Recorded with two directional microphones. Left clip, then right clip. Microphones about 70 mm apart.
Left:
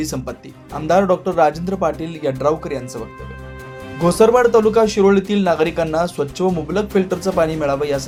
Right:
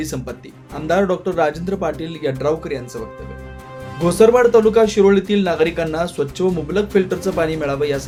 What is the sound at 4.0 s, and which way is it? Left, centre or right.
Speech, left.